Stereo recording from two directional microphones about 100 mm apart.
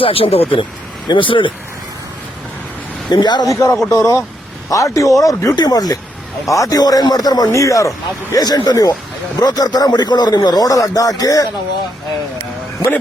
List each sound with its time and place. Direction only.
0.0 s speech: 70° left (ahead or behind)
1.0 s speech: 55° left (ahead or behind)
3.1 s a man's voice: 45° left (ahead or behind)
3.5 s speech: 30° left (ahead or behind)